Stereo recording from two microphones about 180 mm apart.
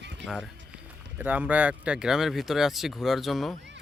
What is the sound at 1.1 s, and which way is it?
Speech, 10° right (ahead or behind).